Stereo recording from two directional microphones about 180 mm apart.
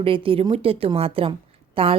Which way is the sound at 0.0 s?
30° right (ahead or behind).